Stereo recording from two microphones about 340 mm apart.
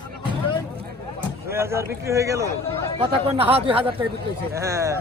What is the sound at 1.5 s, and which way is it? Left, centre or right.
Speech, centre.